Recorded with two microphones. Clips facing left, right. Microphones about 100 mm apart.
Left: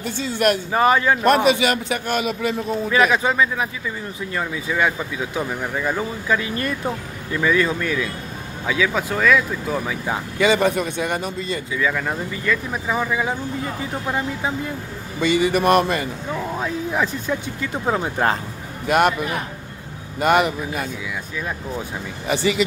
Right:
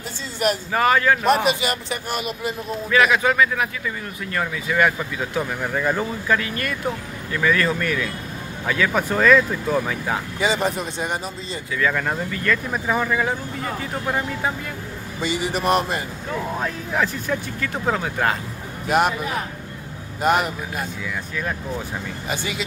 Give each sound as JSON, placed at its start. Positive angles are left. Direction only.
{"t": 0.0, "sound": "a man's voice", "side_deg": 60}
{"t": 0.7, "sound": "a man's voice", "side_deg": 20}
{"t": 1.2, "sound": "a man's voice", "side_deg": 70}
{"t": 2.9, "sound": "a man's voice", "side_deg": 25}
{"t": 6.4, "sound": "a man's voice", "side_deg": 25}
{"t": 7.3, "sound": "speech", "side_deg": 15}
{"t": 10.4, "sound": "a man's voice", "side_deg": 65}
{"t": 11.9, "sound": "speech", "side_deg": 0}
{"t": 15.5, "sound": "a man's voice", "side_deg": 60}
{"t": 16.5, "sound": "speech", "side_deg": 5}
{"t": 17.0, "sound": "speech", "side_deg": 15}
{"t": 18.9, "sound": "a man's voice", "side_deg": 60}
{"t": 20.2, "sound": "a man's voice", "side_deg": 65}